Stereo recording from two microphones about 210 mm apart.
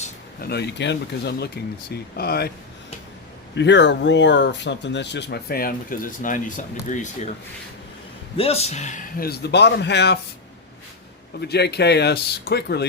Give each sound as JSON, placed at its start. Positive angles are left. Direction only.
{"t": 0.4, "sound": "speech", "side_deg": 55}
{"t": 3.5, "sound": "speech", "side_deg": 55}
{"t": 8.4, "sound": "speech", "side_deg": 30}
{"t": 11.3, "sound": "speech", "side_deg": 50}